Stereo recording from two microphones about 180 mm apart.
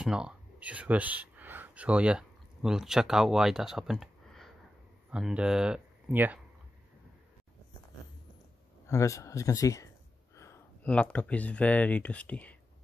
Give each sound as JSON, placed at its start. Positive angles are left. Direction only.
{"t": 0.0, "sound": "speech", "side_deg": -5}
{"t": 8.8, "sound": "speech", "side_deg": 15}